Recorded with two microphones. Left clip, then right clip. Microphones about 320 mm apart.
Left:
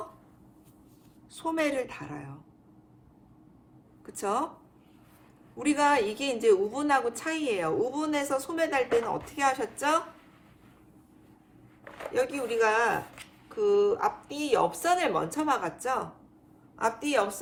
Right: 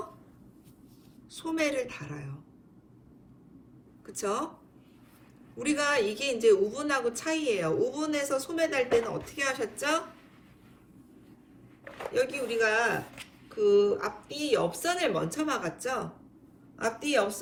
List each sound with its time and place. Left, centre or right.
1.3 s a woman's voice: left
4.0 s speech: left
5.5 s a woman's voice: left
12.1 s a woman's voice: centre